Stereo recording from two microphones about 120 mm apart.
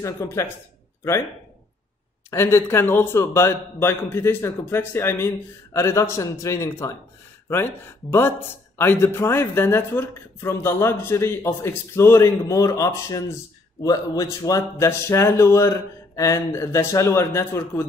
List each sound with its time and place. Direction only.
0.0 s speech: 25° left (ahead or behind)
2.3 s speech: 20° left (ahead or behind)